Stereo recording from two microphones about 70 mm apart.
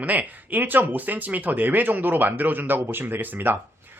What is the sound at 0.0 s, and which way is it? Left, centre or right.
Speech, right.